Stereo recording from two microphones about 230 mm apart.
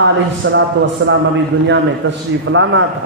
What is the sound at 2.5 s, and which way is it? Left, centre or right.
Speech, right.